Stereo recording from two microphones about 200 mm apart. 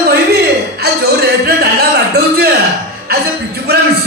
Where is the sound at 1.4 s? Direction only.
55° right (ahead or behind).